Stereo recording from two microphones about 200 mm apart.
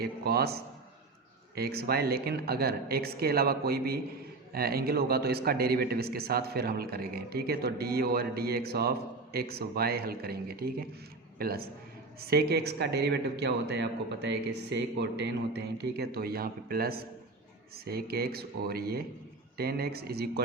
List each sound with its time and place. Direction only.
0.0 s speech: 50° right (ahead or behind)